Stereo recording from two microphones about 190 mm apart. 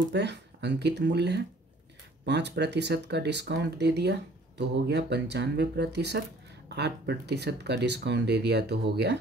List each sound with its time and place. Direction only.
0.1 s speech: 65° right (ahead or behind)